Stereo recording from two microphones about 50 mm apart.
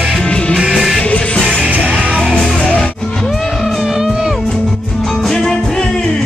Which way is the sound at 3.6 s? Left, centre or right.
Centre.